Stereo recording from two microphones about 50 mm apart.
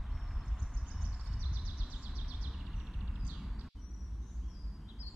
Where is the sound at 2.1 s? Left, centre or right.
Right.